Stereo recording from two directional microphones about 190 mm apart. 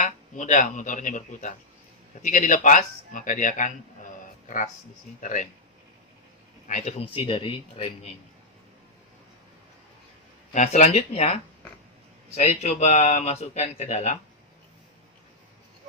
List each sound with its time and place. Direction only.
0.0 s a man's voice: 40° left (ahead or behind)
6.7 s speech: 40° left (ahead or behind)
10.5 s speech: 40° left (ahead or behind)